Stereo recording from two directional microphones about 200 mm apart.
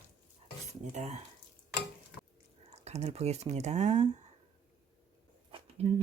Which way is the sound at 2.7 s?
35° right (ahead or behind).